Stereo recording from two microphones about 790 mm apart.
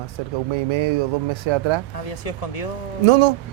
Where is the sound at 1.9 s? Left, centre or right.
Left.